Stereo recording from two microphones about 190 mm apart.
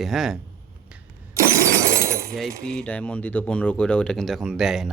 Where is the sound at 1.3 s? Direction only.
15° right (ahead or behind).